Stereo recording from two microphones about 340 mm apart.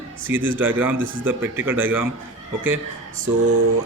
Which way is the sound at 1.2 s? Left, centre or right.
Centre.